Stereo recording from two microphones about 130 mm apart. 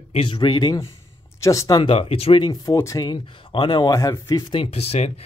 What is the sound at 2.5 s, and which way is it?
Speech, 25° left (ahead or behind).